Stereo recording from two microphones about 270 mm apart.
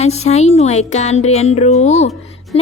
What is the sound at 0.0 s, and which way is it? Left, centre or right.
Speech, left.